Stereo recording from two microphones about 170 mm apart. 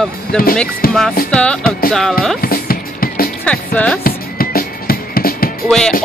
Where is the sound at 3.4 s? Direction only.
5° left (ahead or behind).